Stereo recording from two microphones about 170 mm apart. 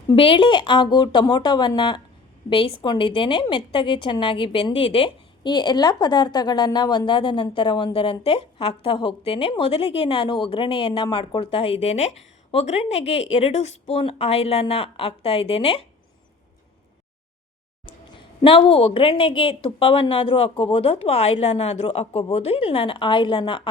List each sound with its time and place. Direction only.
0.1 s a woman's voice: 30° left (ahead or behind)
17.8 s a woman's voice: 30° left (ahead or behind)